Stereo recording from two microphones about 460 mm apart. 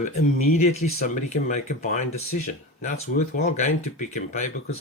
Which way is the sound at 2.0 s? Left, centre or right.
Left.